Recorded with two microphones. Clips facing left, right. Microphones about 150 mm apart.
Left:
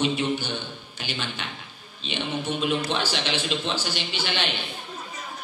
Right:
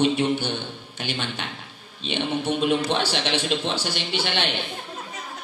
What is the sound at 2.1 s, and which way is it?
A man's voice, 60° right (ahead or behind).